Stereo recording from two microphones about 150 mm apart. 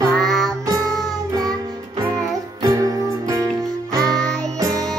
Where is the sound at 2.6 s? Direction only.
20° right (ahead or behind).